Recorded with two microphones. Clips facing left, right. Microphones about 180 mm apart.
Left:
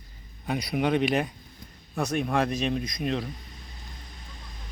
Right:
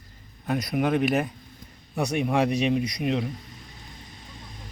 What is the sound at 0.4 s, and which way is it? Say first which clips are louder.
Speech: right 2 dB; centre (ahead or behind).